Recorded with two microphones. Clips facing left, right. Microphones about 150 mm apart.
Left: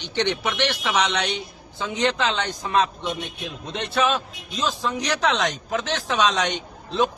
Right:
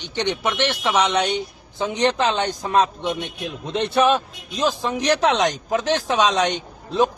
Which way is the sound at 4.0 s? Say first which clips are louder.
Right 4 dB; 55° right (ahead or behind).